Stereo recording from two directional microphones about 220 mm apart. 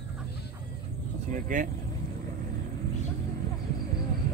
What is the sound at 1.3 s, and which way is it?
Speech, 35° right (ahead or behind).